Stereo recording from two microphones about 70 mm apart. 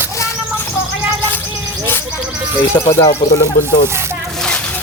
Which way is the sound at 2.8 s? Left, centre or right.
Left.